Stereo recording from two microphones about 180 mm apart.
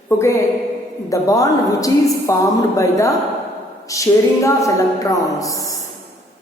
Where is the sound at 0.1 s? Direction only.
15° left (ahead or behind).